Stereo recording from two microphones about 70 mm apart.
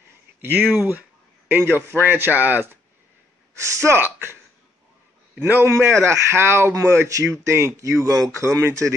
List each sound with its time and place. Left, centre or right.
0.6 s speech: centre
1.6 s speech: right
3.5 s speech: right
5.4 s speech: right
6.7 s speech: right